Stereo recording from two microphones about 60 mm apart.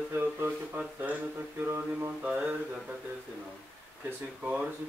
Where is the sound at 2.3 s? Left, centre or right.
Right.